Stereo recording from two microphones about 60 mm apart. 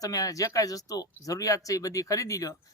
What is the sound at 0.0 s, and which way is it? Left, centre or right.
A man's voice, left.